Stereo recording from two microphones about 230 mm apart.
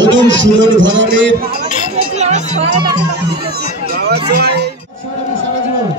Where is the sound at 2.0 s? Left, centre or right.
Right.